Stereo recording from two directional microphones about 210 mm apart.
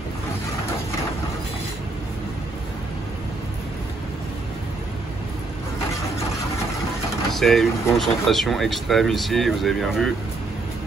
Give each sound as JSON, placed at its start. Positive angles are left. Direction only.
{"t": 7.3, "sound": "speech", "side_deg": 0}